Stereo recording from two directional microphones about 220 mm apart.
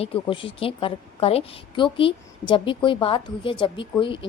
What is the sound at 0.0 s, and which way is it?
A woman's voice, 25° left (ahead or behind).